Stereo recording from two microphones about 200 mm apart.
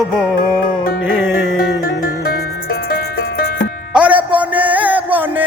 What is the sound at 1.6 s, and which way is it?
Music, 45° left (ahead or behind).